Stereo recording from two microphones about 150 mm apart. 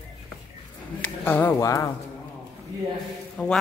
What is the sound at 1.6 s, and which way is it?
Speech, 20° left (ahead or behind).